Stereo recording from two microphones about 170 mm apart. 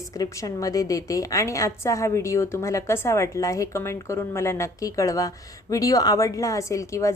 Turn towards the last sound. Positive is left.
turn(degrees=15)  # may be behind; listen again after turning